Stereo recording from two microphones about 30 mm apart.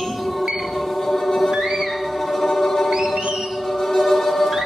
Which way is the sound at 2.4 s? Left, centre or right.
Centre.